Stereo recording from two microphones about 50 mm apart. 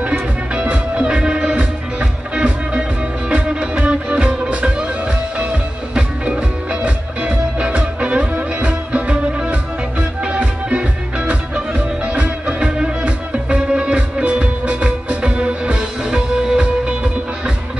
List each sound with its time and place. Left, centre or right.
0.1 s music: right